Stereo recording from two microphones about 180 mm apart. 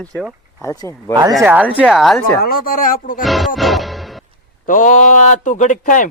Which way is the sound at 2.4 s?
55° left (ahead or behind).